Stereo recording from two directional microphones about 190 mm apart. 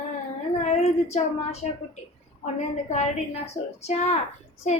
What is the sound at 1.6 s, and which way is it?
Speech, 40° left (ahead or behind).